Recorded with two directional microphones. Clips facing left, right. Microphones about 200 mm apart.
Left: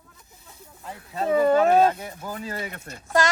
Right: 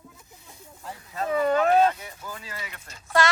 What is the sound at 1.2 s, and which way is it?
Speech, 35° left (ahead or behind).